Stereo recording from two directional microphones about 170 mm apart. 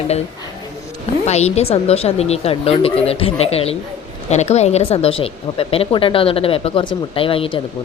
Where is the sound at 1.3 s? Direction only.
40° left (ahead or behind).